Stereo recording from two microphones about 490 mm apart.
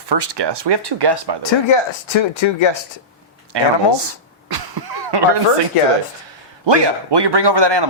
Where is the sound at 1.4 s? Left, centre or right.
Left.